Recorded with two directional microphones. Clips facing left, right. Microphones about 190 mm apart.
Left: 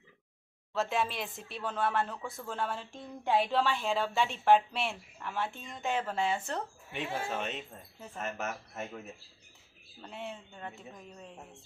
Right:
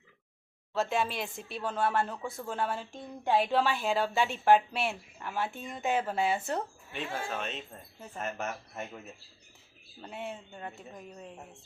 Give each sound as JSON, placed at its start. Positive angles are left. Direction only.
{"t": 0.7, "sound": "a woman's voice", "side_deg": 0}
{"t": 6.9, "sound": "speech", "side_deg": 20}
{"t": 7.7, "sound": "a woman's voice", "side_deg": 0}
{"t": 10.0, "sound": "a woman's voice", "side_deg": -5}